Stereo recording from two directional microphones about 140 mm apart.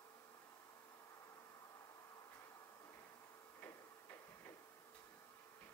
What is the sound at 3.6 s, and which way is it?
Tick-tock, 15° left (ahead or behind).